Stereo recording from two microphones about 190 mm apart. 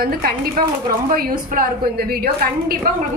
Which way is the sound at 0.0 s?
50° right (ahead or behind).